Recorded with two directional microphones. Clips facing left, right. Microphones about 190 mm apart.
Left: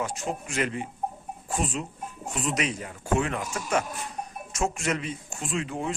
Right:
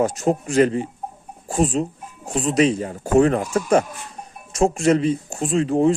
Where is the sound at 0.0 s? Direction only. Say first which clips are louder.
Right 11 dB; 40° right (ahead or behind).